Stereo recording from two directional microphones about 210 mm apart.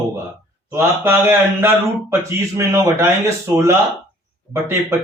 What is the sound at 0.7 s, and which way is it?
A man's voice, 10° right (ahead or behind).